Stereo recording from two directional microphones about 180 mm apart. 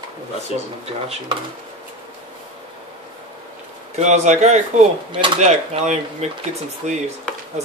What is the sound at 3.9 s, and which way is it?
Speech, 40° right (ahead or behind).